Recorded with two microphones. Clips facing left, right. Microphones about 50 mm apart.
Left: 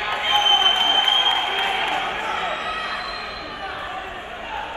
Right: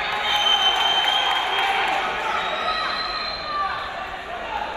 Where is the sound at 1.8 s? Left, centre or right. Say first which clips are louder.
Right 1 dB; left.